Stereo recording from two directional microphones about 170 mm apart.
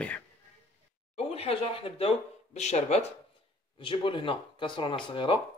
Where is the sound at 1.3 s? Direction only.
35° left (ahead or behind).